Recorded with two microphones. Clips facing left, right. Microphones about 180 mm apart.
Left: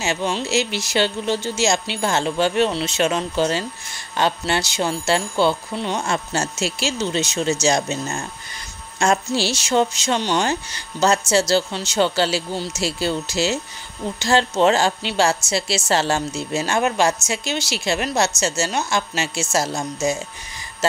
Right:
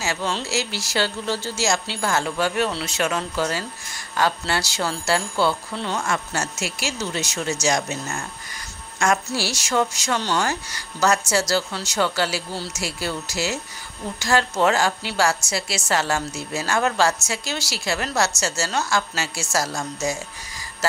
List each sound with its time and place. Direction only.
0.0 s a woman's voice: 20° left (ahead or behind)